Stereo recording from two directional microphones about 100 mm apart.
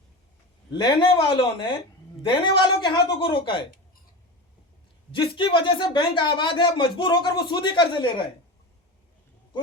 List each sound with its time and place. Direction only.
0.7 s speech: 50° left (ahead or behind)
2.2 s a woman's voice: 55° left (ahead or behind)
5.1 s speech: 55° left (ahead or behind)